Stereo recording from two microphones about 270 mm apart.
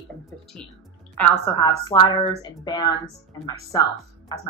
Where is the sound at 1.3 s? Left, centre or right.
Centre.